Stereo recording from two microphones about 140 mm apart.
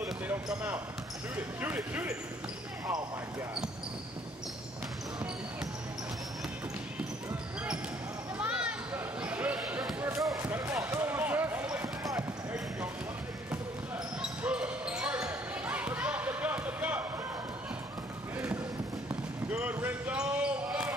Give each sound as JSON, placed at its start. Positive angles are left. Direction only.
{"t": 0.0, "sound": "basketball bounce", "side_deg": -5}
{"t": 1.3, "sound": "speech", "side_deg": -15}
{"t": 8.4, "sound": "basketball bounce", "side_deg": -10}
{"t": 11.8, "sound": "basketball bounce", "side_deg": -25}
{"t": 14.4, "sound": "basketball bounce", "side_deg": -10}
{"t": 19.5, "sound": "basketball bounce", "side_deg": -10}